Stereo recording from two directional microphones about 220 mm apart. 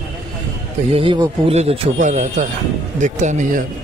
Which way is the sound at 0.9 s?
25° right (ahead or behind).